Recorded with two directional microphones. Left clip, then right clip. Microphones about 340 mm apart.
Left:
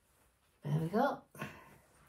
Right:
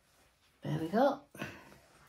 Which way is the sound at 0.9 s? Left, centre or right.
Right.